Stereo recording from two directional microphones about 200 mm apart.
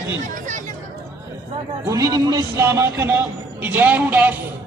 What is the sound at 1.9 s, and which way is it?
A man's voice, 20° right (ahead or behind).